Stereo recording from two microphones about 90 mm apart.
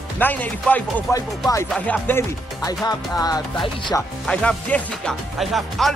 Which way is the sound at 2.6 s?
45° left (ahead or behind).